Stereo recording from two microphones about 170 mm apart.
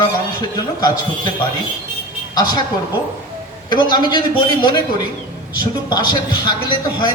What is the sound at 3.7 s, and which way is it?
A man's voice, 25° left (ahead or behind).